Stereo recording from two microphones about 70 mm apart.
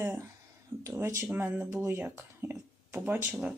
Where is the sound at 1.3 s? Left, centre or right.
Right.